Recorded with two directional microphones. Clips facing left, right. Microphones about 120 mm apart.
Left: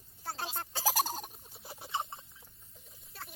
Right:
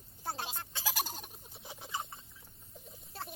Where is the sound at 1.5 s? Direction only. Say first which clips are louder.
Even; centre (ahead or behind).